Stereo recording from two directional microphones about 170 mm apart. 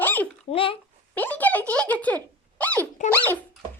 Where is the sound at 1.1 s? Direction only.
10° left (ahead or behind).